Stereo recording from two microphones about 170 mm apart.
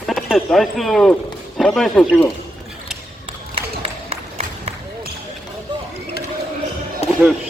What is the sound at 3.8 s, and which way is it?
Run, 35° right (ahead or behind).